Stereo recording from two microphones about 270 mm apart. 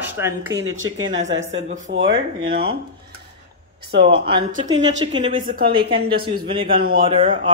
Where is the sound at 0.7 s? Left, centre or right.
Right.